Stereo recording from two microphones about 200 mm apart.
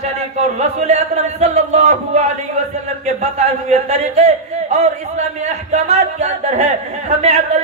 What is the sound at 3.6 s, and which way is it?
A man's voice, 35° right (ahead or behind).